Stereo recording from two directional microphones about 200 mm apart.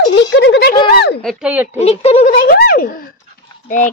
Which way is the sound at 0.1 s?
60° left (ahead or behind).